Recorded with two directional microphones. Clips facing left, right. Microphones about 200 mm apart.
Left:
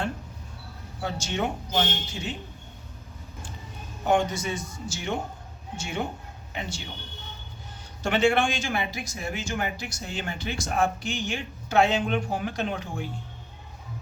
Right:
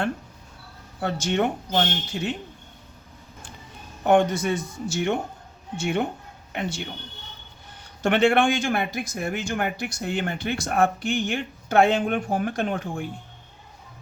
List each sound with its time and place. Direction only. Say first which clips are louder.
1.0 s speech: right 5 dB; 60° right (ahead or behind)
4.0 s speech: right 5 dB; 60° right (ahead or behind)
8.0 s speech: right 3 dB; 60° right (ahead or behind)